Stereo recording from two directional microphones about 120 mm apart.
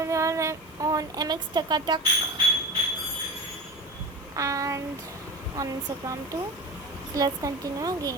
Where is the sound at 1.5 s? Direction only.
35° right (ahead or behind).